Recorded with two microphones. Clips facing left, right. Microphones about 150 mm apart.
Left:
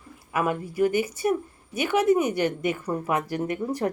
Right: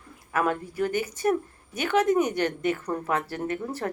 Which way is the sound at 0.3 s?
10° left (ahead or behind).